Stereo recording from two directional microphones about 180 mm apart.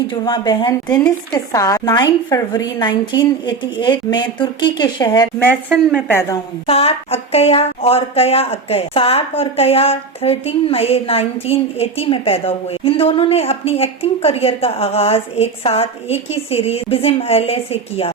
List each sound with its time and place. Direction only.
0.1 s a woman's voice: 25° left (ahead or behind)
0.9 s a woman's voice: 5° left (ahead or behind)
1.5 s a woman's voice: 20° left (ahead or behind)
6.7 s speech: 35° left (ahead or behind)